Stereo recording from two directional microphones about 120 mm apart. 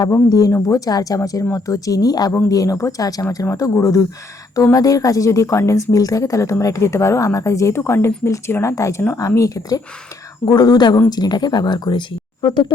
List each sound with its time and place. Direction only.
0.0 s speech: 35° left (ahead or behind)